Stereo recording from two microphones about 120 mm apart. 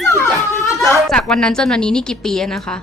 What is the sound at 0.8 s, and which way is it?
A woman's voice, 5° left (ahead or behind).